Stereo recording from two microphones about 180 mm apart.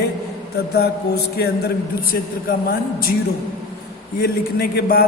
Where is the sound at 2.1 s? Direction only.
55° left (ahead or behind).